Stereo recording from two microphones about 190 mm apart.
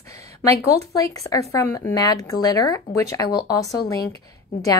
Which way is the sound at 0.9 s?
20° left (ahead or behind).